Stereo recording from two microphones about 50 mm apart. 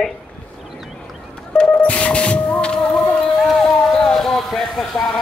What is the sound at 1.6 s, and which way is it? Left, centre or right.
Music, left.